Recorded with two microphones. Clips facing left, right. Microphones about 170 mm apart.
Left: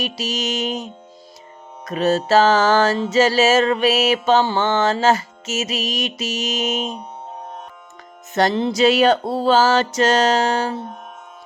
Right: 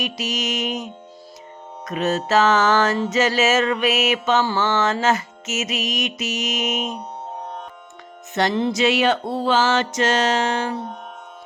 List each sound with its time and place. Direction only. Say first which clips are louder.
0.0 s music: left 1 dB; 30° left (ahead or behind)
8.3 s music: left 2 dB; 40° left (ahead or behind)